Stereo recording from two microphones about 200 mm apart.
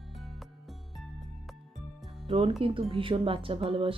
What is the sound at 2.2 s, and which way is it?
Speech, 25° right (ahead or behind).